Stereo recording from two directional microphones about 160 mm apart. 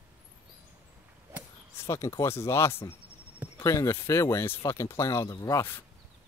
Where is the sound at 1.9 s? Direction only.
20° left (ahead or behind).